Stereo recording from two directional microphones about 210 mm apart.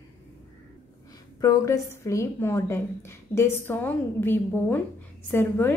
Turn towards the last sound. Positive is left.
turn(degrees=10)  # may be behind; listen again after turning